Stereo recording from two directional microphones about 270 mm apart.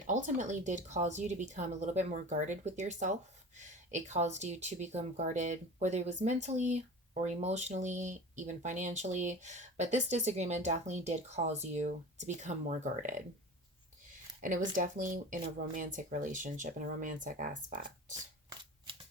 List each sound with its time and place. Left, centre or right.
0.1 s speech: right
14.4 s speech: right